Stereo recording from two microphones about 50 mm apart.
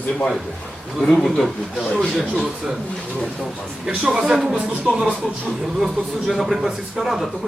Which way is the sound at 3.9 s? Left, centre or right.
Centre.